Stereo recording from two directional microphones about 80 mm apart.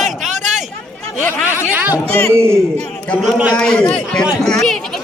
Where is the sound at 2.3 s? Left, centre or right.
Right.